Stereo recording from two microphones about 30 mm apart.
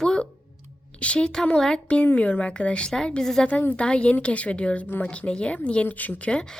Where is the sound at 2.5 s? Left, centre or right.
Left.